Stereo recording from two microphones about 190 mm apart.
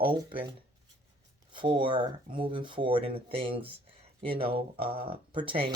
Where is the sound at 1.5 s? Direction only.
25° right (ahead or behind).